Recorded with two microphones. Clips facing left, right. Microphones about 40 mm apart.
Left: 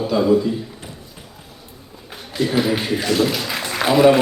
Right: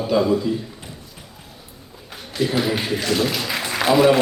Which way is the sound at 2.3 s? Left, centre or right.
Centre.